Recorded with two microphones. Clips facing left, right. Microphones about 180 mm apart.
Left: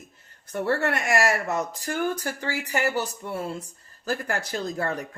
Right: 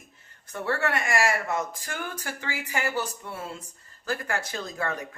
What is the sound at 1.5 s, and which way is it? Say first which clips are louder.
Speech: left 2 dB; 40° left (ahead or behind).